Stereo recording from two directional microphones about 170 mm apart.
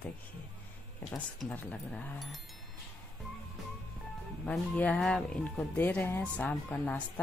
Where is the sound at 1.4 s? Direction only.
5° left (ahead or behind).